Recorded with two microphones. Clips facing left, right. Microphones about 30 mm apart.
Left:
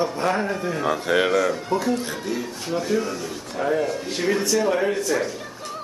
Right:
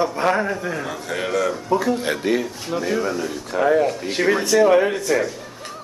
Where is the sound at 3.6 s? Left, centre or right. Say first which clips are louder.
Right 5 dB; right.